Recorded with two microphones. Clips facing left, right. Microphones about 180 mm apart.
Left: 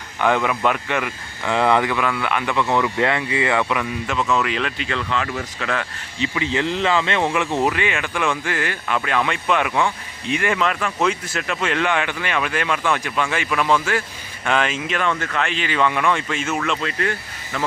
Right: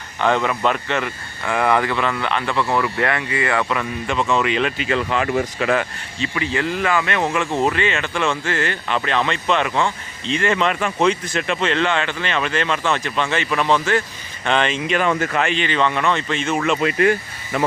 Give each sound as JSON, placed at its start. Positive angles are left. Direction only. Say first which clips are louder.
{"t": 0.2, "sound": "speech", "louder": "even", "side_deg": 10}
{"t": 5.5, "sound": "speech", "louder": "right 4 dB", "side_deg": -15}
{"t": 6.1, "sound": "speech", "louder": "left 1 dB", "side_deg": 20}
{"t": 7.7, "sound": "speech", "louder": "right 2 dB", "side_deg": 10}
{"t": 10.6, "sound": "speech", "louder": "right 2 dB", "side_deg": 0}
{"t": 16.6, "sound": "speech", "louder": "right 5 dB", "side_deg": -15}